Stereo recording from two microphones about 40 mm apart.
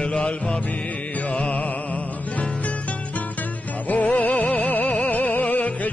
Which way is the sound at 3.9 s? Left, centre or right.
Left.